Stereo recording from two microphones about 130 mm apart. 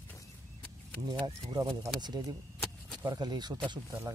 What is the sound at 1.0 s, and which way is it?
Speech, 30° right (ahead or behind).